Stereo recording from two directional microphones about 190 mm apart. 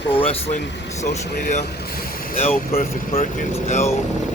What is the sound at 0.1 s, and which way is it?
Speech, 30° left (ahead or behind).